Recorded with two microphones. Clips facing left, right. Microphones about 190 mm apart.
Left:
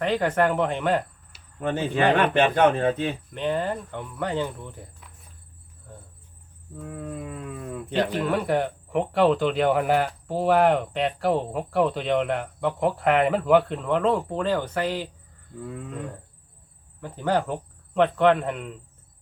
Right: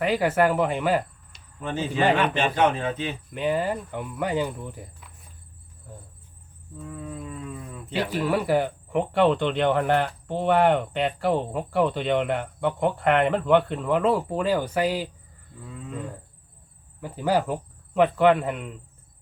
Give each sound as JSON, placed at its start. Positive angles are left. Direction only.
{"t": 0.0, "sound": "speech", "side_deg": -10}
{"t": 1.6, "sound": "speech", "side_deg": 60}
{"t": 3.3, "sound": "speech", "side_deg": -5}
{"t": 6.9, "sound": "dog", "side_deg": 60}
{"t": 7.9, "sound": "speech", "side_deg": -5}
{"t": 17.0, "sound": "speech", "side_deg": -10}